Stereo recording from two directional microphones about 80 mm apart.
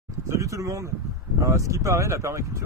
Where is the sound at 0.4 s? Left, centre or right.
Right.